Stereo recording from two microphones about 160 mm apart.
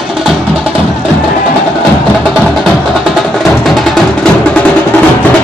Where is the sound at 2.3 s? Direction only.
Centre (ahead or behind).